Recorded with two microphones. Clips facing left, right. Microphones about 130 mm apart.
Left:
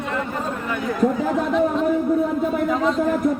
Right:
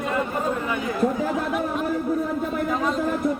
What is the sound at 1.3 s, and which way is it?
A man's voice, 5° right (ahead or behind).